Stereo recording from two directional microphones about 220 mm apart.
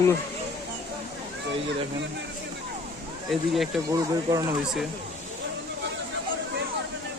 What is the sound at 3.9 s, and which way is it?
Speech, 15° right (ahead or behind).